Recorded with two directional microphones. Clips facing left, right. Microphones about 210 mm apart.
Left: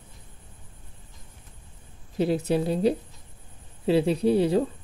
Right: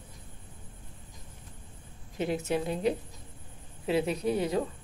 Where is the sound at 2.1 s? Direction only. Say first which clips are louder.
Left 6 dB; 35° left (ahead or behind).